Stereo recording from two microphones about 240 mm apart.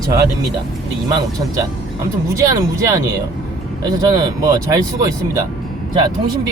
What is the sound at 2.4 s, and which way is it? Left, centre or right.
Speech, centre.